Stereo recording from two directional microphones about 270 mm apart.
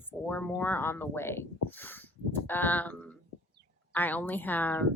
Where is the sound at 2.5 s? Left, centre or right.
Centre.